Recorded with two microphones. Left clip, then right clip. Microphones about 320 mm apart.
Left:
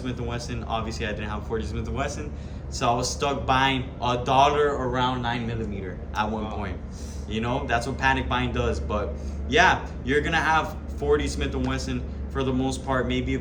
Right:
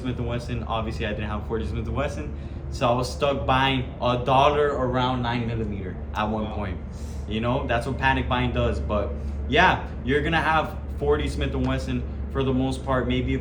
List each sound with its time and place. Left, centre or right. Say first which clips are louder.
0.0 s speech: right 1 dB; centre